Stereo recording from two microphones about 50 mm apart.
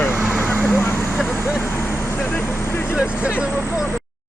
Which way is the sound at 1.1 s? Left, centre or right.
Centre.